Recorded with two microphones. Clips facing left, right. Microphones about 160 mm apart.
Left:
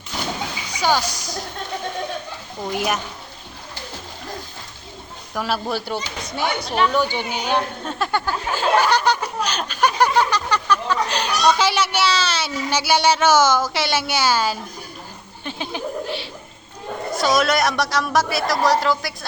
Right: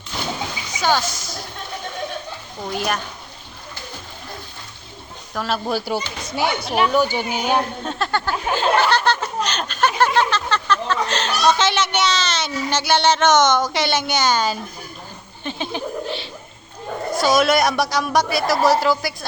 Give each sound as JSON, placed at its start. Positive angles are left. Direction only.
{"t": 0.8, "sound": "speech", "side_deg": 10}
{"t": 1.1, "sound": "speech", "side_deg": 40}
{"t": 2.7, "sound": "speech", "side_deg": 15}
{"t": 5.3, "sound": "speech", "side_deg": 10}
{"t": 5.6, "sound": "speech", "side_deg": -5}
{"t": 7.9, "sound": "speech", "side_deg": 10}
{"t": 15.4, "sound": "a sound", "side_deg": 5}
{"t": 17.2, "sound": "a woman's voice", "side_deg": 0}